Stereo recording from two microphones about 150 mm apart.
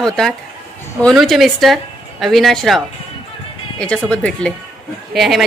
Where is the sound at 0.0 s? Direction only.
5° left (ahead or behind).